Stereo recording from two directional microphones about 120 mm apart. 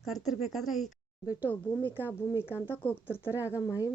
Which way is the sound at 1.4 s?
15° left (ahead or behind).